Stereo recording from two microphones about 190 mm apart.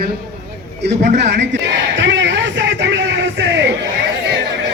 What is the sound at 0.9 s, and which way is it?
Speech, 40° right (ahead or behind).